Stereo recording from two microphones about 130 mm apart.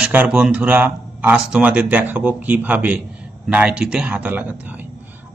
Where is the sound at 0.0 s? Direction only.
10° right (ahead or behind).